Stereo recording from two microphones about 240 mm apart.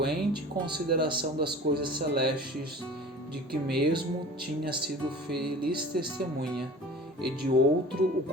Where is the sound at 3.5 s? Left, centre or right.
Right.